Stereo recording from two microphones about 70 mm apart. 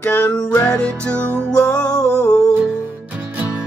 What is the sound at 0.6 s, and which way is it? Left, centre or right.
Music, centre.